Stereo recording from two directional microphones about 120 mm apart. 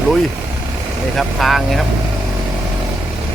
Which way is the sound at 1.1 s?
Centre (ahead or behind).